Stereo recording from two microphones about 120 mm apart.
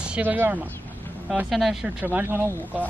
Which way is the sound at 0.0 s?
10° right (ahead or behind).